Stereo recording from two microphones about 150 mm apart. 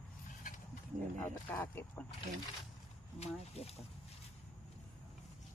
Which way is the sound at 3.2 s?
45° left (ahead or behind).